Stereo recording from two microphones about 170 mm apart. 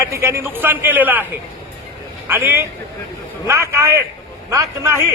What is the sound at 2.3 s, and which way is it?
A man's voice, 10° right (ahead or behind).